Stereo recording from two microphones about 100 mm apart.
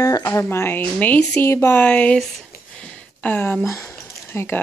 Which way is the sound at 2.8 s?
15° left (ahead or behind).